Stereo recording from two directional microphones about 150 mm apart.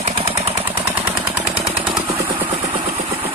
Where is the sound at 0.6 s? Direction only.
15° right (ahead or behind).